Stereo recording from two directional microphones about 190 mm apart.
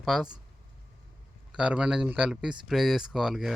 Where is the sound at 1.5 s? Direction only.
5° right (ahead or behind).